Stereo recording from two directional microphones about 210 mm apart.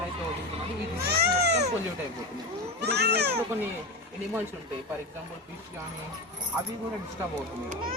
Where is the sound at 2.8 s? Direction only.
50° right (ahead or behind).